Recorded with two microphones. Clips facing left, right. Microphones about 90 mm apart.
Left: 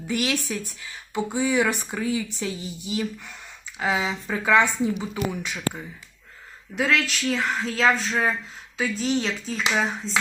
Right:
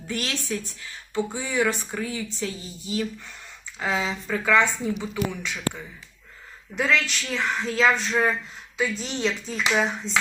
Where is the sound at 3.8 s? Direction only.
15° left (ahead or behind).